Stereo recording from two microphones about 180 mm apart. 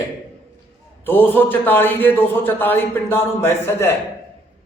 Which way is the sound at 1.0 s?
10° left (ahead or behind).